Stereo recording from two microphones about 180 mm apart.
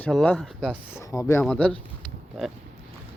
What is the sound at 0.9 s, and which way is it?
Speech, 15° left (ahead or behind).